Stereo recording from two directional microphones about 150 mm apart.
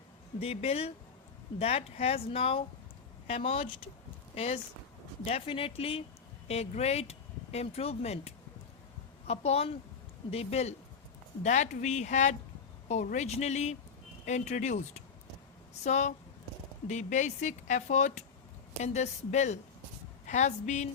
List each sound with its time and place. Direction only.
0.3 s speech: 40° left (ahead or behind)